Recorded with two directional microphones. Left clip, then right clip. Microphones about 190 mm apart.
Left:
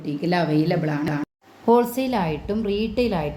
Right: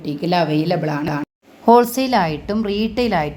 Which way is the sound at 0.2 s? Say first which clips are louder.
Right 4 dB; 20° right (ahead or behind).